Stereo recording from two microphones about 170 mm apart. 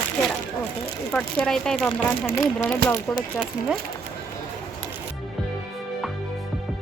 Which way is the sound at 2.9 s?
15° left (ahead or behind).